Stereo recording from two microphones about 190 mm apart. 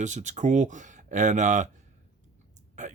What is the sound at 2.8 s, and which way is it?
Speech, 40° right (ahead or behind).